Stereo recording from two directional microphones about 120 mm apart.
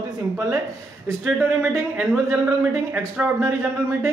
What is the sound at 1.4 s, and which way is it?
Speech, 15° right (ahead or behind).